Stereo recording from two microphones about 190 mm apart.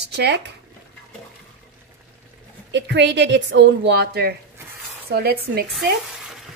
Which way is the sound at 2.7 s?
65° right (ahead or behind).